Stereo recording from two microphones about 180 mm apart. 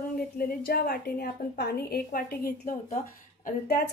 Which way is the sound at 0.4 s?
55° left (ahead or behind).